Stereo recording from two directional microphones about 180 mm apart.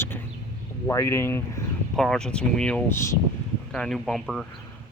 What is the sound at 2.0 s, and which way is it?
Speech, 5° left (ahead or behind).